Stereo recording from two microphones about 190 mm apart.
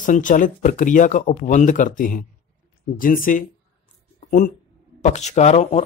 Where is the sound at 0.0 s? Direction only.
45° left (ahead or behind).